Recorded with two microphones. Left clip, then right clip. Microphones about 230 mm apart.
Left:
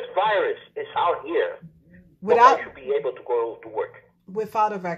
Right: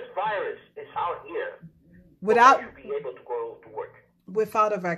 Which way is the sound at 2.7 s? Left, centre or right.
Left.